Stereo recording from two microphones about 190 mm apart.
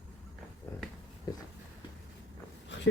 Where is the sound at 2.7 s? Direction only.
70° left (ahead or behind).